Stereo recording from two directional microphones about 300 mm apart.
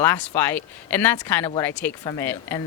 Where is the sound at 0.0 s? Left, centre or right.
Centre.